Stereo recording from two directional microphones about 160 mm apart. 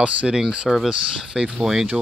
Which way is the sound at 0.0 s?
5° right (ahead or behind).